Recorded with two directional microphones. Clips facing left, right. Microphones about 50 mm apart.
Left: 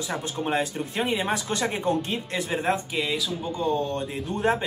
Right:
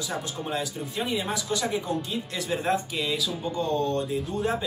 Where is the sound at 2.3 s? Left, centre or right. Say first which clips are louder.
Left 1 dB; left.